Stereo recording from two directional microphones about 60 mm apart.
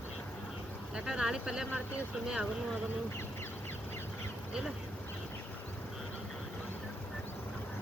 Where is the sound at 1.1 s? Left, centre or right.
Centre.